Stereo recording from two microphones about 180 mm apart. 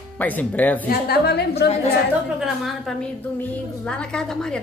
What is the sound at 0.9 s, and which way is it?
Speech, 60° left (ahead or behind).